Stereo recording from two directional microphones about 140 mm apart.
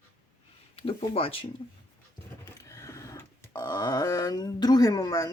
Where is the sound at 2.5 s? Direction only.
20° left (ahead or behind).